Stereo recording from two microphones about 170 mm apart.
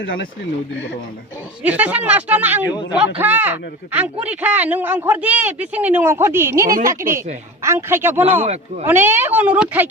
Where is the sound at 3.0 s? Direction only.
10° right (ahead or behind).